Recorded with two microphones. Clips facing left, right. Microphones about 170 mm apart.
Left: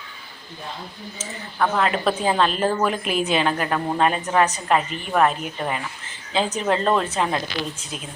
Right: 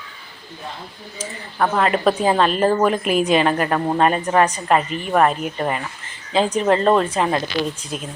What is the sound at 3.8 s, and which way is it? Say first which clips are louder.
Speech: right 4 dB; 25° right (ahead or behind).